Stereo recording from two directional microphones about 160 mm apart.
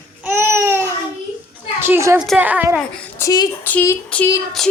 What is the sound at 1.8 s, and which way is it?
Speech, 15° right (ahead or behind).